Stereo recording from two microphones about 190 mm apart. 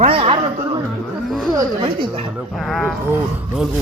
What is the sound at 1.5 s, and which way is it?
Speech, 25° right (ahead or behind).